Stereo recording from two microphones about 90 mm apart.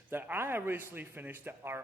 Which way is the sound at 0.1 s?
25° right (ahead or behind).